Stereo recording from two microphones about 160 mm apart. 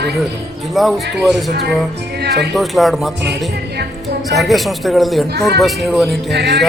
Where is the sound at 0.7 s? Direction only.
Centre (ahead or behind).